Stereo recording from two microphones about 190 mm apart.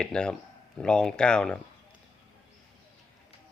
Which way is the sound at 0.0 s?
5° left (ahead or behind).